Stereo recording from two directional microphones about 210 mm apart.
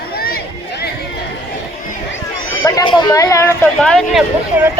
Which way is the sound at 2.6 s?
20° left (ahead or behind).